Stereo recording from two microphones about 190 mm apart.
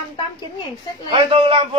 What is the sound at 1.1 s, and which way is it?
Speech, 30° right (ahead or behind).